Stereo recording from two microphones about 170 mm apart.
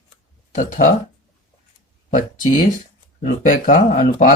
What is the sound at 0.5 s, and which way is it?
Speech, 50° left (ahead or behind).